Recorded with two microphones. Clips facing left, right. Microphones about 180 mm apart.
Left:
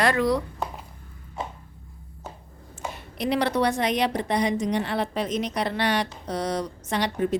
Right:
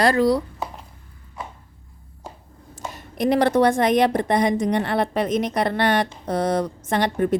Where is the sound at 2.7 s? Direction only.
45° right (ahead or behind).